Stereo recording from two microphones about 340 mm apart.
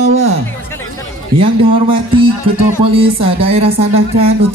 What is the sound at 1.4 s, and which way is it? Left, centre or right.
A man's voice, centre.